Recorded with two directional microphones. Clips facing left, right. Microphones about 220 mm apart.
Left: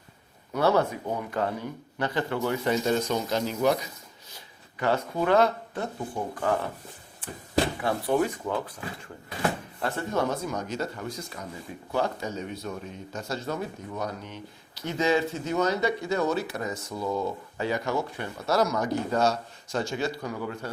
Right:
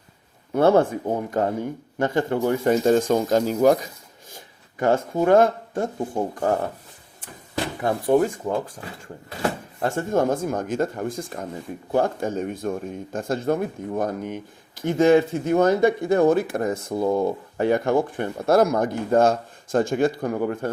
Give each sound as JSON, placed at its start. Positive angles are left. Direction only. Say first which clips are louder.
{"t": 0.5, "sound": "speech", "louder": "right 6 dB", "side_deg": -50}
{"t": 7.8, "sound": "speech", "louder": "right 6 dB", "side_deg": -45}
{"t": 9.8, "sound": "speech", "louder": "right 6 dB", "side_deg": -45}